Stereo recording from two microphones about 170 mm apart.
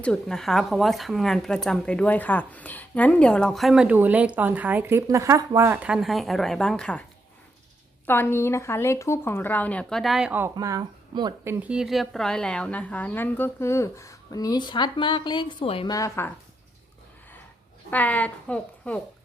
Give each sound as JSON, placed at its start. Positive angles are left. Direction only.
{"t": 0.0, "sound": "a woman's voice", "side_deg": 5}
{"t": 8.0, "sound": "a woman's voice", "side_deg": 15}
{"t": 10.5, "sound": "speech", "side_deg": -20}
{"t": 11.4, "sound": "a woman's voice", "side_deg": -5}
{"t": 15.9, "sound": "a woman's voice", "side_deg": 20}
{"t": 17.9, "sound": "a woman's voice", "side_deg": 10}